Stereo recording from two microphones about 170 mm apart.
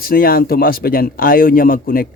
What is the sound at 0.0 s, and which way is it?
Speech, 60° left (ahead or behind).